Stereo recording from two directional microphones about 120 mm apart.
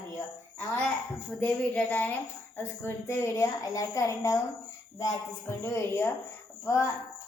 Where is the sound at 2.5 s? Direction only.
20° left (ahead or behind).